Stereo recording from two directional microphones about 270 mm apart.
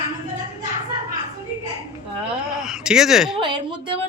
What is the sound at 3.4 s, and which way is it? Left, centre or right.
Speech, centre.